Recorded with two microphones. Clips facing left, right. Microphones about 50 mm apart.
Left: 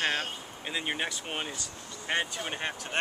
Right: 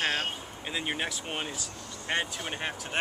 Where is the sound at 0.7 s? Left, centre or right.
Centre.